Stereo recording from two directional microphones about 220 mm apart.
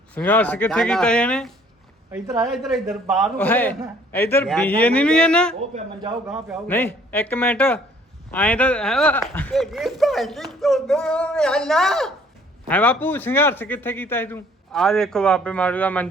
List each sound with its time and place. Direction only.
0.1 s speech: 5° left (ahead or behind)
2.0 s speech: 15° right (ahead or behind)
2.5 s speech: centre (ahead or behind)
3.3 s a man's voice: 10° left (ahead or behind)
6.7 s a man's voice: 10° left (ahead or behind)